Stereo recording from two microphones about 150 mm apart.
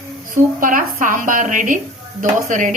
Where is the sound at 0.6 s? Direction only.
65° right (ahead or behind).